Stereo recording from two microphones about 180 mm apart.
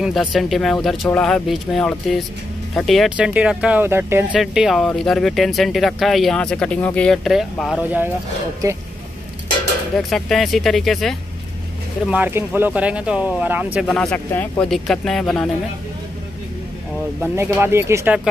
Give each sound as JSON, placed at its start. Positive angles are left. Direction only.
{"t": 0.0, "sound": "speech", "side_deg": 0}
{"t": 8.6, "sound": "speech", "side_deg": -15}
{"t": 9.9, "sound": "speech", "side_deg": 0}
{"t": 12.1, "sound": "speech", "side_deg": -10}
{"t": 13.8, "sound": "speech", "side_deg": 5}
{"t": 17.2, "sound": "speech", "side_deg": -15}